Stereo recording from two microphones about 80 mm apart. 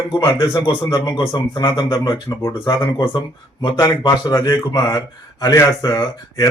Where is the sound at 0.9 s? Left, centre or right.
Left.